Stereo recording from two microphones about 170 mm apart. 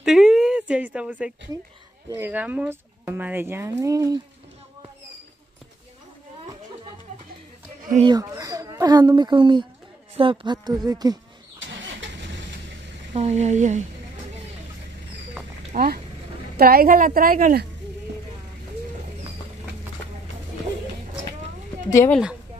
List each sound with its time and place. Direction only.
0.0 s a sound: 5° right (ahead or behind)
2.0 s speech: 15° right (ahead or behind)
8.0 s a woman's voice: 20° right (ahead or behind)
11.6 s vehicle: 90° right
13.1 s speech: 40° right (ahead or behind)
15.7 s a woman's voice: 60° right (ahead or behind)
22.1 s a woman's voice: 5° right (ahead or behind)